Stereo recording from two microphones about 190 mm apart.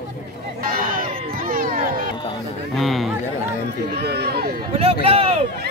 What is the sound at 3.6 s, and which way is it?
Run, 60° right (ahead or behind).